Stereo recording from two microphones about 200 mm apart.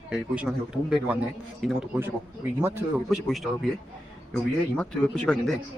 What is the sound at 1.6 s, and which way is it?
Speech, 5° right (ahead or behind).